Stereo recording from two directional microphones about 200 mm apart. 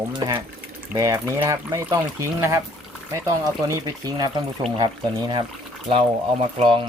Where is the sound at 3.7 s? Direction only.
20° right (ahead or behind).